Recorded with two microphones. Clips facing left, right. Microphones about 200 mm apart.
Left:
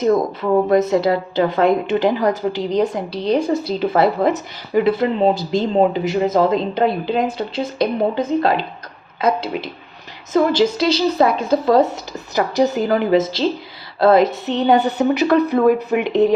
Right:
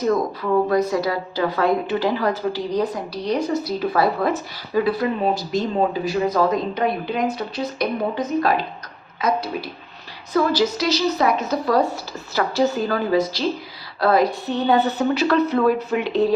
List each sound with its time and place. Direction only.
0.7 s a woman's voice: 25° left (ahead or behind)